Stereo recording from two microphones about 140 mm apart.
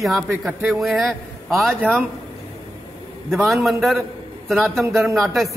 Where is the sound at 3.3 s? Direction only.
Centre (ahead or behind).